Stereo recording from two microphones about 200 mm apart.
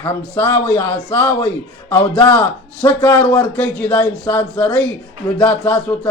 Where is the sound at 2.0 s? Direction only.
20° left (ahead or behind).